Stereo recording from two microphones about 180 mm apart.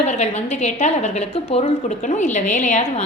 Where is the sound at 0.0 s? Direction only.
35° left (ahead or behind).